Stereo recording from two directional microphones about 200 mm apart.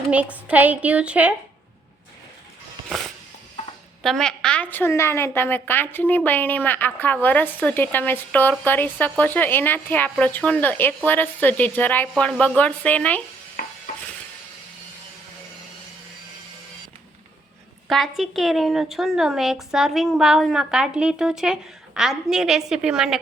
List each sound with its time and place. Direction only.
0.1 s a woman's voice: 5° right (ahead or behind)
4.0 s a woman's voice: centre (ahead or behind)
13.6 s stir: 50° left (ahead or behind)
17.8 s a woman's voice: centre (ahead or behind)